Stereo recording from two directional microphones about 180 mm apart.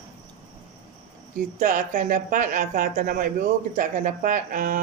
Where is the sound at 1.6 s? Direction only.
50° right (ahead or behind).